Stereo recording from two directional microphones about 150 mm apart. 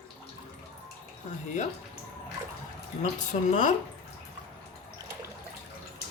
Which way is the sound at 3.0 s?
50° left (ahead or behind).